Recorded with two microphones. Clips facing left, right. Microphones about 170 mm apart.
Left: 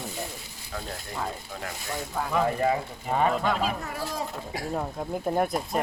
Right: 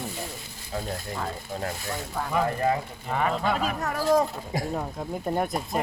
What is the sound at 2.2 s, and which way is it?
Speech, 5° left (ahead or behind).